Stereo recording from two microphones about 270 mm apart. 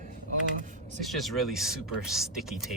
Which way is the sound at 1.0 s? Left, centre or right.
Centre.